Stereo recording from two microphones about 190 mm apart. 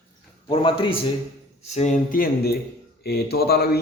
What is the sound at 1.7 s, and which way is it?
A man's voice, 40° left (ahead or behind).